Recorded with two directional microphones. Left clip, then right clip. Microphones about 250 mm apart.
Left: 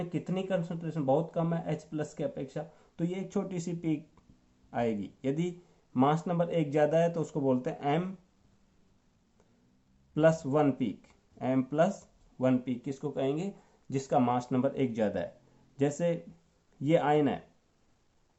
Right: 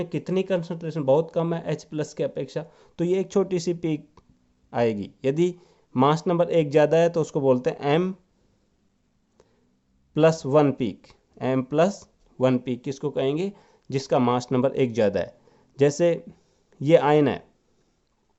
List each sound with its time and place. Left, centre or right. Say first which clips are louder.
0.1 s speech: right 8 dB; right
10.2 s speech: right 7 dB; right